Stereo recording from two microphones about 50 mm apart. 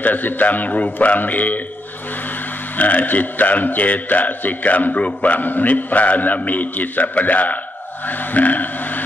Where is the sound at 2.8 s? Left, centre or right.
Left.